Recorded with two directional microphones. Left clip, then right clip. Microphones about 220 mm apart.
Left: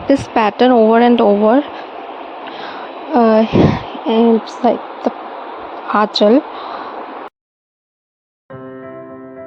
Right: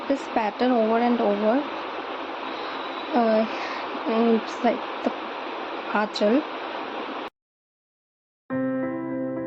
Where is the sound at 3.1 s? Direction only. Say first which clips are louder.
Left 10 dB; 40° left (ahead or behind).